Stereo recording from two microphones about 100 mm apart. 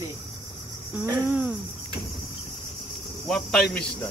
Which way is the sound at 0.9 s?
20° right (ahead or behind).